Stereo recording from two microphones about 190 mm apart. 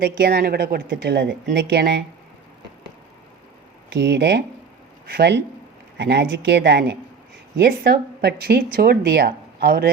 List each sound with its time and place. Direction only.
0.0 s speech: 55° right (ahead or behind)
3.8 s speech: 60° right (ahead or behind)